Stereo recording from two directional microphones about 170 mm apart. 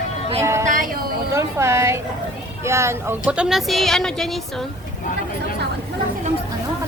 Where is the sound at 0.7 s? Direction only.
55° right (ahead or behind).